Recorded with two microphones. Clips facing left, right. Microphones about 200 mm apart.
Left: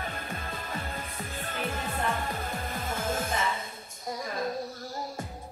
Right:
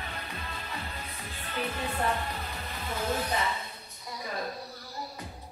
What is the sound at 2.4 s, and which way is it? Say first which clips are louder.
Music: left 4 dB; 50° left (ahead or behind).